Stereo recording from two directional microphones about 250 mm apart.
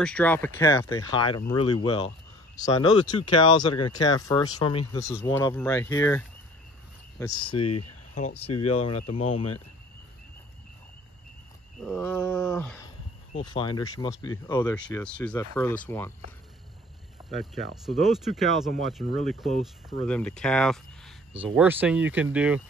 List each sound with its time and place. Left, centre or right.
0.0 s speech: centre; by 9.6 s left
11.8 s speech: centre
17.4 s speech: centre